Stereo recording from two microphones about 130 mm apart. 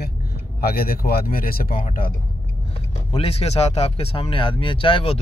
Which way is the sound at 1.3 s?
90° left.